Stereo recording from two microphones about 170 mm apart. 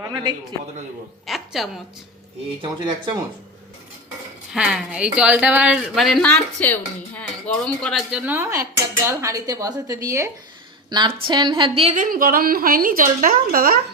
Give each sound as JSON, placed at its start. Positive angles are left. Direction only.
{"t": 0.0, "sound": "a man's voice", "side_deg": -20}
{"t": 1.3, "sound": "a woman's voice", "side_deg": 0}
{"t": 2.6, "sound": "a woman's voice", "side_deg": -30}
{"t": 4.5, "sound": "speech", "side_deg": -5}
{"t": 8.1, "sound": "a woman's voice", "side_deg": -10}
{"t": 11.9, "sound": "a woman's voice", "side_deg": -55}